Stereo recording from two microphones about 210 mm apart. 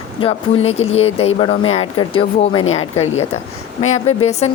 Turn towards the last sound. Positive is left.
turn(degrees=30)  # may be behind; listen again after turning